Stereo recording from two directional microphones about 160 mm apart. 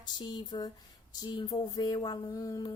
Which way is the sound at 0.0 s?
25° left (ahead or behind).